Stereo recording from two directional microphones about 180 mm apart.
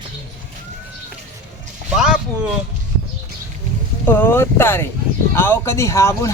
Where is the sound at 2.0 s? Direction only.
5° right (ahead or behind).